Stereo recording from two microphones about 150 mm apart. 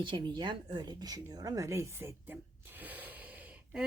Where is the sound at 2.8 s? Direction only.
10° right (ahead or behind).